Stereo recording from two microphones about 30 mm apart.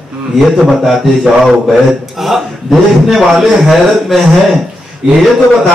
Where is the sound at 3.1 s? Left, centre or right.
Centre.